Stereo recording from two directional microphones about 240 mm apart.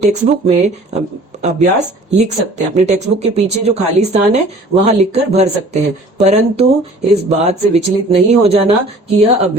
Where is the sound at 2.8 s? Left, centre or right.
Right.